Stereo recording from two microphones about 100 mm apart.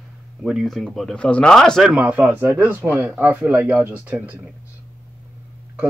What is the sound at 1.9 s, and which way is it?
Speech, 15° right (ahead or behind).